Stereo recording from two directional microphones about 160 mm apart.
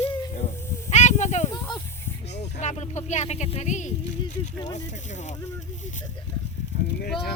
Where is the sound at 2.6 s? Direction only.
45° left (ahead or behind).